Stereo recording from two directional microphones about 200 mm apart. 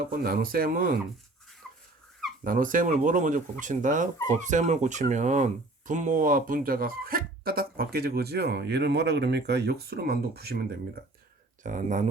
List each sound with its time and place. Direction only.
0.0 s speech: 45° right (ahead or behind)
2.4 s speech: 40° right (ahead or behind)
11.6 s speech: 40° right (ahead or behind)